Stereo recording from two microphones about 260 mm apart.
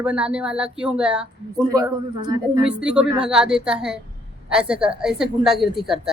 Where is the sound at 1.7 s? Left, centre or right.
Centre.